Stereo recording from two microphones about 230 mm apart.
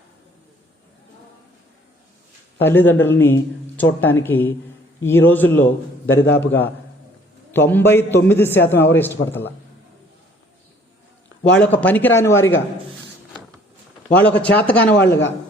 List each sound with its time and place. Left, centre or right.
2.6 s a man's voice: centre
6.1 s a man's voice: left
7.5 s a man's voice: centre
11.5 s a man's voice: centre
14.2 s a man's voice: centre